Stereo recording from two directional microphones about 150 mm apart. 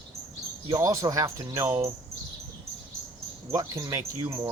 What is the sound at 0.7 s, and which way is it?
Speech, 20° right (ahead or behind).